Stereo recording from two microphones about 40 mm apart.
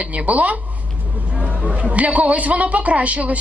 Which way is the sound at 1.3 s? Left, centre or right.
Right.